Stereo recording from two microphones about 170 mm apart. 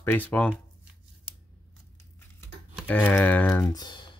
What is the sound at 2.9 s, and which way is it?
Speech, 10° left (ahead or behind).